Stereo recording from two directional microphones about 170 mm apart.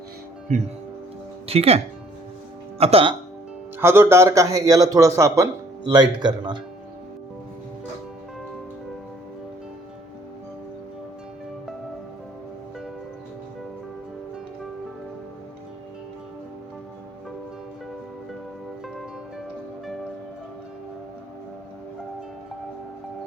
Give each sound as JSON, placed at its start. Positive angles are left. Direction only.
{"t": 0.5, "sound": "speech", "side_deg": -45}
{"t": 3.8, "sound": "a man's voice", "side_deg": -15}